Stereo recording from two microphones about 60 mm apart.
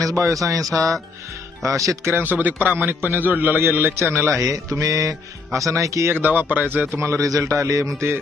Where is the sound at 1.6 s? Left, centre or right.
Right.